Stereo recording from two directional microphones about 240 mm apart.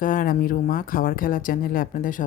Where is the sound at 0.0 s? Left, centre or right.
Left.